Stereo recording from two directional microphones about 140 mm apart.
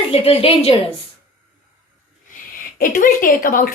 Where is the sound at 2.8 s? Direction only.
90° left.